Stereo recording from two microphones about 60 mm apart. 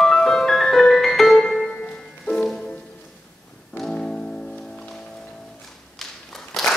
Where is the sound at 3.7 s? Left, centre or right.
Centre.